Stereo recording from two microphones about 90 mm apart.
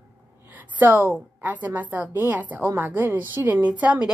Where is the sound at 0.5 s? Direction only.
20° right (ahead or behind).